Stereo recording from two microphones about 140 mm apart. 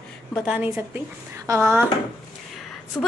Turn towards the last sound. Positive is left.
turn(degrees=15)  # may be behind; listen again after turning